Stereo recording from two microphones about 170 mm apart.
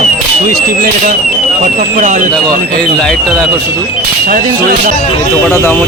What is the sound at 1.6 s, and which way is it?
Speech, 50° right (ahead or behind).